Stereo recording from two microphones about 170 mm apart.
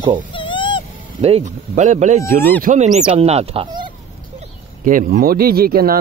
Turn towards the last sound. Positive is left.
turn(degrees=-60)  # may be behind; listen again after turning